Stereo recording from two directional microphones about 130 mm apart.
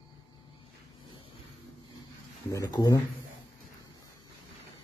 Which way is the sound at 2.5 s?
30° left (ahead or behind).